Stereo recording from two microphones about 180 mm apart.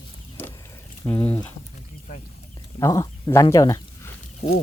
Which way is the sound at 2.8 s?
20° left (ahead or behind).